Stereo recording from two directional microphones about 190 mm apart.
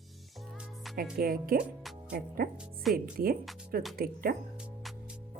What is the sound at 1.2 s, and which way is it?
Speech, 50° right (ahead or behind).